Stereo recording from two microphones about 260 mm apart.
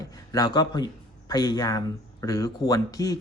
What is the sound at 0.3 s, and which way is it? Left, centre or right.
Speech, centre.